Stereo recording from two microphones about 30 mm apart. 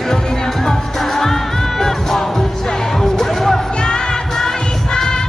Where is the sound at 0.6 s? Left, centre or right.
Centre.